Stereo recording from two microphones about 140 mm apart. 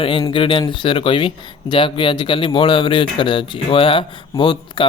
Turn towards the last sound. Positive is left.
turn(degrees=35)  # may be behind; listen again after turning